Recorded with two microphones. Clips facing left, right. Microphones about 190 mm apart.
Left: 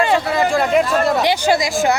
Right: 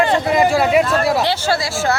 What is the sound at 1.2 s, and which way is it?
Speech, 15° left (ahead or behind).